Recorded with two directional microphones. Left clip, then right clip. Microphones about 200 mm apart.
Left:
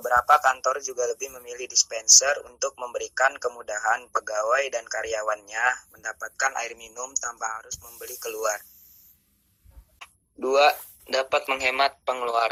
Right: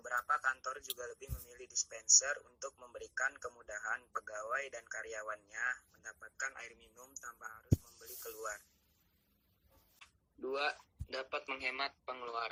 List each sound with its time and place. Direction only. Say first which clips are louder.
0.2 s a man's voice: left 16 dB; 35° left (ahead or behind)
10.0 s speech: left 15 dB; 35° left (ahead or behind)